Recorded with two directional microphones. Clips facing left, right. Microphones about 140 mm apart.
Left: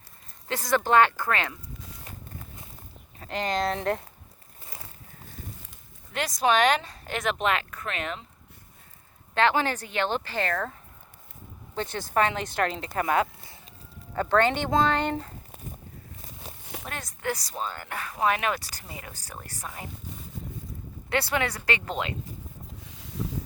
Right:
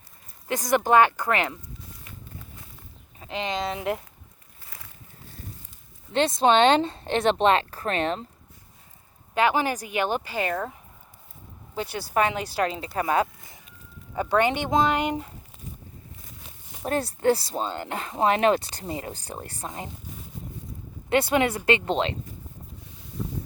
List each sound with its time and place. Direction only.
0.4 s speech: 15° right (ahead or behind)
2.1 s walk: 35° left (ahead or behind)
3.2 s speech: centre (ahead or behind)
6.1 s speech: 25° right (ahead or behind)
9.3 s speech: 10° right (ahead or behind)
13.0 s speech: 25° right (ahead or behind)
16.8 s speech: 35° right (ahead or behind)
21.1 s speech: 15° right (ahead or behind)
22.8 s boat: 90° left